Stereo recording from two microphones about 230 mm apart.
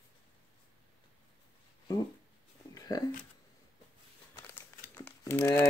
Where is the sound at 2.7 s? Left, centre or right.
Centre.